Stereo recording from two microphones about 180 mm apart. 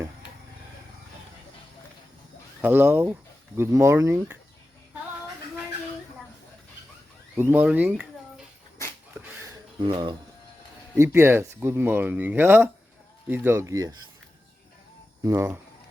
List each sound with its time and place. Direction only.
2.6 s speech: 10° right (ahead or behind)
7.3 s speech: 10° right (ahead or behind)
9.4 s a sound: 25° right (ahead or behind)
10.9 s speech: 15° right (ahead or behind)
15.2 s speech: 15° right (ahead or behind)